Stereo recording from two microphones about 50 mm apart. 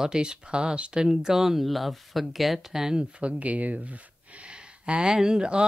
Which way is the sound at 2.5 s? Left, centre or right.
Centre.